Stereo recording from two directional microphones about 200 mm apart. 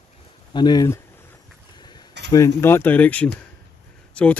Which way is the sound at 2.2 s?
15° left (ahead or behind).